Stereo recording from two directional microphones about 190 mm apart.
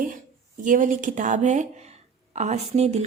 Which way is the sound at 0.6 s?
45° right (ahead or behind).